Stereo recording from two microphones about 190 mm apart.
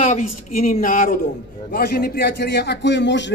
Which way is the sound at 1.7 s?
55° left (ahead or behind).